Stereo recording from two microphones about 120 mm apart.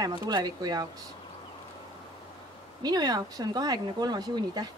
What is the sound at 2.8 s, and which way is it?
Speech, 35° right (ahead or behind).